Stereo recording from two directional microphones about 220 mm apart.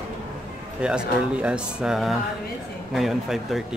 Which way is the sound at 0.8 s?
5° right (ahead or behind).